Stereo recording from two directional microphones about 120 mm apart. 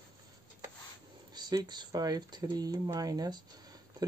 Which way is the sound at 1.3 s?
35° right (ahead or behind).